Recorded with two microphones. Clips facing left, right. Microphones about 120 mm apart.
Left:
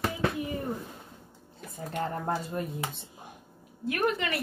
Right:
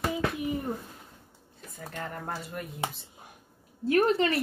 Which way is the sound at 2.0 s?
30° left (ahead or behind).